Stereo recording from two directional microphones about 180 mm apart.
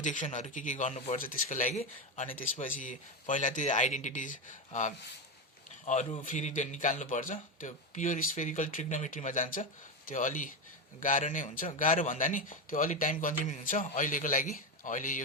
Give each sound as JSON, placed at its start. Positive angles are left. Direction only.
{"t": 0.0, "sound": "speech", "side_deg": 45}